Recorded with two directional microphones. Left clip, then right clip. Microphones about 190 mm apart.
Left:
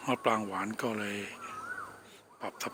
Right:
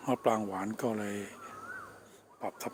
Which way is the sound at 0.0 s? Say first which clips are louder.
Even; 20° right (ahead or behind).